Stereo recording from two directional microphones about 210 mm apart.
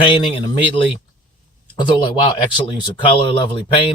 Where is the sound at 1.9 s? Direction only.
25° left (ahead or behind).